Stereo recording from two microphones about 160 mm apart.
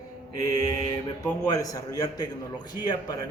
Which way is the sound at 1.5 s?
20° left (ahead or behind).